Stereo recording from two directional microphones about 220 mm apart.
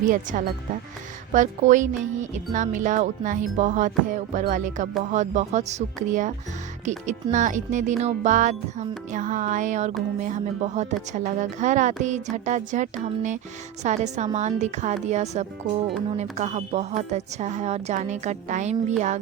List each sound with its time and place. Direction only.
0.0 s speech: 35° right (ahead or behind)